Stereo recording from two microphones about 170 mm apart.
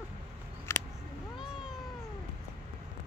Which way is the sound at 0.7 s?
15° left (ahead or behind).